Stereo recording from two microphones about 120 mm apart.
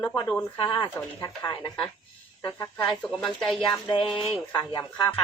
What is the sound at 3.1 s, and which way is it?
Speech, centre (ahead or behind).